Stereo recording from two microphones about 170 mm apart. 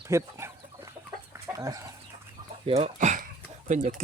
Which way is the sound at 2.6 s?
35° right (ahead or behind).